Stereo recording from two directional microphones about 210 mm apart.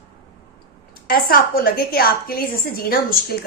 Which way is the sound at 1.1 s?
45° left (ahead or behind).